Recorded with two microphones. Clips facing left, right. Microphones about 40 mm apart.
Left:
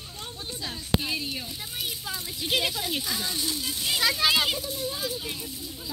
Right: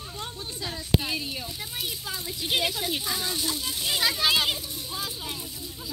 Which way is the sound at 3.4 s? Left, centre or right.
Right.